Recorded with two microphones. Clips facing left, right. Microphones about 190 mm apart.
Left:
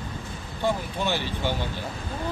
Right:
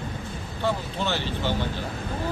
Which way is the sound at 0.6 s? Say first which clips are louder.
Left 1 dB; 15° left (ahead or behind).